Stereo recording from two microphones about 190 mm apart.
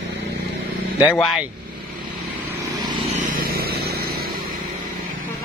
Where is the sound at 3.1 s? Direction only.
50° right (ahead or behind).